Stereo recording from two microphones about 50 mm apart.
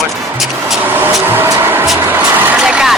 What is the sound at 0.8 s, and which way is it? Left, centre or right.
Vehicle, right.